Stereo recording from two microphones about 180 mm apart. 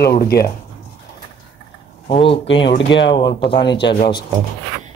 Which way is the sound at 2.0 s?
30° left (ahead or behind).